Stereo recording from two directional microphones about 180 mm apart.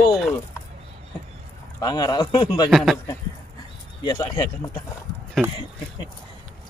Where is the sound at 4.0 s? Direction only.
20° left (ahead or behind).